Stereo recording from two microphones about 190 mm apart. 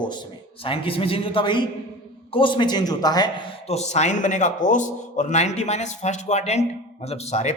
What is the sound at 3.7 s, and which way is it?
A man's voice, 35° left (ahead or behind).